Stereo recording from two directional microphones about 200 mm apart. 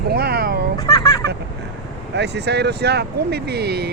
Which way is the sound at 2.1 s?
60° right (ahead or behind).